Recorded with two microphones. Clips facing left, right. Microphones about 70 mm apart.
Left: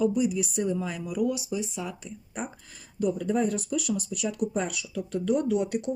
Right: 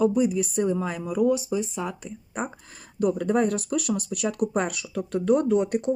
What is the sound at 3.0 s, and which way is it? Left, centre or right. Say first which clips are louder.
Speech: right 3 dB; right.